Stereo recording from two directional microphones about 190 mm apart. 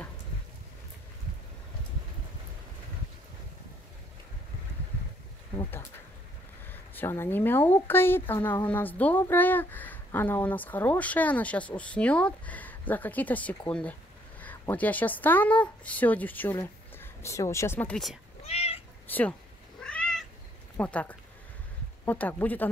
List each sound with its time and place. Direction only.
6.7 s a woman's voice: 10° left (ahead or behind)
18.4 s cat: 30° left (ahead or behind)
19.0 s speech: 10° left (ahead or behind)
19.8 s cat: 5° left (ahead or behind)
20.7 s speech: 10° left (ahead or behind)